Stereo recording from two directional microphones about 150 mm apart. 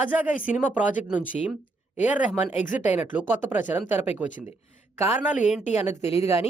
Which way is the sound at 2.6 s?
60° left (ahead or behind).